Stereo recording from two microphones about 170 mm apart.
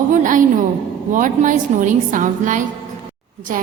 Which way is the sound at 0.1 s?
50° right (ahead or behind).